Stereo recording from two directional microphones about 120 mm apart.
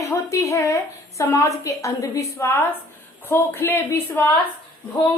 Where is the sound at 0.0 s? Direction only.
25° left (ahead or behind).